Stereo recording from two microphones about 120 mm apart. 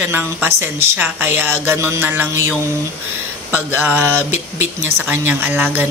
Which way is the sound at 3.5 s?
15° right (ahead or behind).